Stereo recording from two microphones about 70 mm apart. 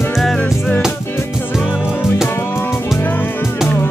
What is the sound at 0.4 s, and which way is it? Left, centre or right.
Music, left.